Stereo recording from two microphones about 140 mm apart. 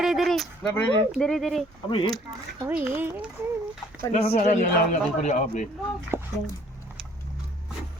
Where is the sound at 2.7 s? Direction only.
15° right (ahead or behind).